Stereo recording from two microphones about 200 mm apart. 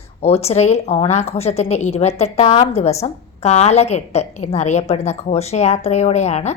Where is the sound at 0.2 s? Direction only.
30° left (ahead or behind).